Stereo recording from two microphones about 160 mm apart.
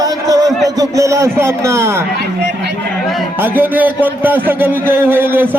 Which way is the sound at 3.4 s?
10° right (ahead or behind).